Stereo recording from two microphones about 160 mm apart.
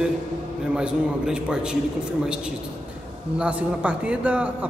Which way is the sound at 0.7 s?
5° right (ahead or behind).